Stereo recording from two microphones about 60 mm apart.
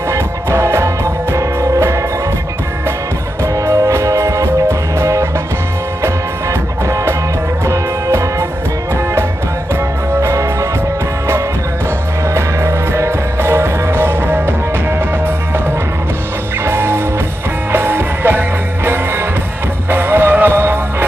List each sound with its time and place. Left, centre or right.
0.1 s music: right
3.5 s music: right
6.5 s music: right
10.2 s music: right
12.3 s music: right
16.6 s music: right